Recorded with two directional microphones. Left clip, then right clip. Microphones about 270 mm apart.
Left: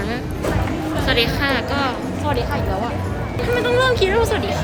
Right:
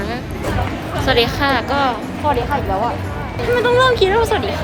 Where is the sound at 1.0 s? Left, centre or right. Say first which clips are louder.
Right 4 dB; centre.